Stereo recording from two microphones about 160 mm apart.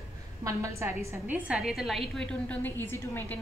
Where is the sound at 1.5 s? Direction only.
Centre (ahead or behind).